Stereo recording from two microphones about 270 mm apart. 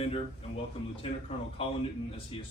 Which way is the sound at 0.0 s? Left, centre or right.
Left.